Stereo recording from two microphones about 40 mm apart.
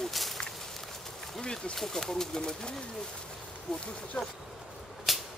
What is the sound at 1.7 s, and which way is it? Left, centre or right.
Speech, centre.